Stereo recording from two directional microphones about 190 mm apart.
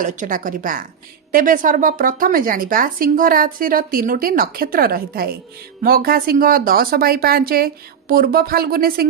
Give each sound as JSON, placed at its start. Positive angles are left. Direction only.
{"t": 0.0, "sound": "speech", "side_deg": -45}